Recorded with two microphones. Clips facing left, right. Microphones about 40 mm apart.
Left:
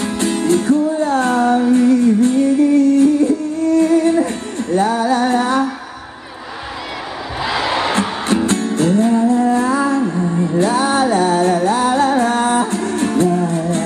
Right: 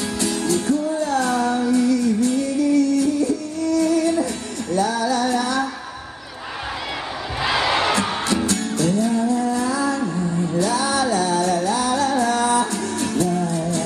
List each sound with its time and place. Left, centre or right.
0.0 s music: left
7.8 s music: left